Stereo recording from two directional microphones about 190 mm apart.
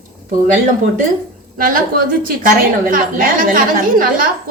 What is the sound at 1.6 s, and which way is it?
A woman's voice, 45° right (ahead or behind).